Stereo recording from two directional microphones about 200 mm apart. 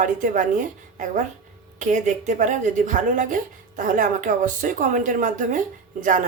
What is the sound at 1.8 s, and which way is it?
A woman's voice, 40° right (ahead or behind).